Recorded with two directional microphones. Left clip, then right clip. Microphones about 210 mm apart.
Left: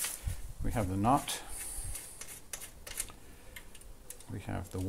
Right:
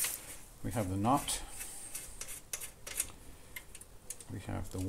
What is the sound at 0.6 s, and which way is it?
Speech, 25° left (ahead or behind).